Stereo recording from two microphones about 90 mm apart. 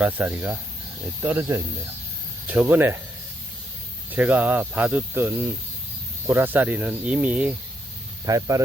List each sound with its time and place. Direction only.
0.0 s speech: 20° right (ahead or behind)
1.4 s speech: 35° right (ahead or behind)
2.5 s speech: 20° right (ahead or behind)
4.1 s speech: 20° right (ahead or behind)
8.2 s speech: 40° right (ahead or behind)